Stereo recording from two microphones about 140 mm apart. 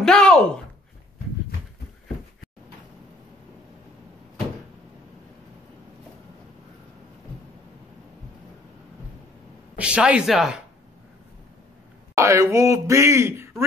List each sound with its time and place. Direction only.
0.0 s a sound: 5° left (ahead or behind)
9.8 s speech: 10° right (ahead or behind)
12.2 s speech: 20° right (ahead or behind)